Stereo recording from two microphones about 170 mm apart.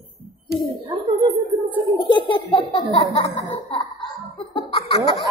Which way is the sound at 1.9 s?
30° left (ahead or behind).